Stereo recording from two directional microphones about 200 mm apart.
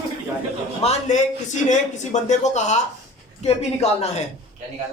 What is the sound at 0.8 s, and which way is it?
Speech, 30° left (ahead or behind).